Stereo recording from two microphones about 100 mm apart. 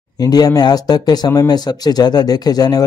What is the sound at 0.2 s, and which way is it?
A man's voice, 40° left (ahead or behind).